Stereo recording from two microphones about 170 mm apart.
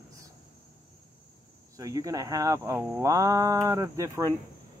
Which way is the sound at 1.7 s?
20° right (ahead or behind).